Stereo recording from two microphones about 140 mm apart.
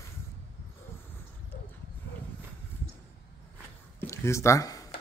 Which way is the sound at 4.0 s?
20° left (ahead or behind).